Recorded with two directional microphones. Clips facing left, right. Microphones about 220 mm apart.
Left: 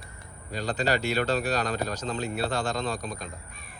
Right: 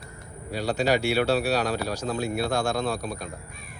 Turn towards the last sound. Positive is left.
turn(degrees=-10)  # may be behind; listen again after turning